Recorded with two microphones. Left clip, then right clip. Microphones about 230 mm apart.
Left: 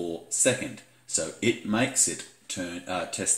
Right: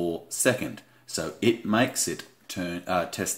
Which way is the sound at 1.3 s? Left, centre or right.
Centre.